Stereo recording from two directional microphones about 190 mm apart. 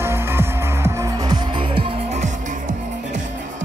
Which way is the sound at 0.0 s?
15° right (ahead or behind).